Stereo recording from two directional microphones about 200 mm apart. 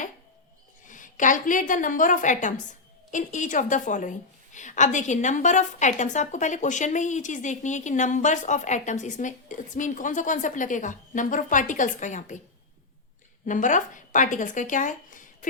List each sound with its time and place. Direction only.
0.9 s a woman's voice: 40° left (ahead or behind)
13.4 s speech: 40° left (ahead or behind)